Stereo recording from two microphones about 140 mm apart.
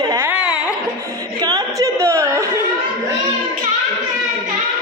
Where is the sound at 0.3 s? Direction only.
10° right (ahead or behind).